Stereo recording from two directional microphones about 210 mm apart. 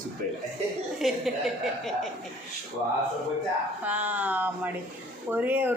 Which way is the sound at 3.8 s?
5° right (ahead or behind).